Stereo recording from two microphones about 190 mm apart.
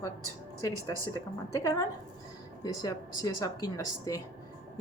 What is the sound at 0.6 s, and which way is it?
Speech, 20° left (ahead or behind).